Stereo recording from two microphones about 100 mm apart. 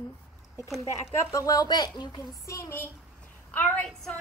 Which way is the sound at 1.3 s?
35° left (ahead or behind).